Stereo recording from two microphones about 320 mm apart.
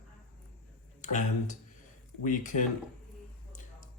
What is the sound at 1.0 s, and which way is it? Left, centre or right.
Speech, left.